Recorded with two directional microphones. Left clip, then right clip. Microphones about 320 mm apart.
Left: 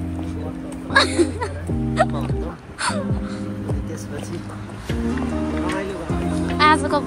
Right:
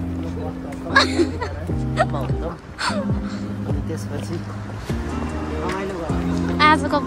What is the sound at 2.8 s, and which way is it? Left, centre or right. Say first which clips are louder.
Speech: even; centre.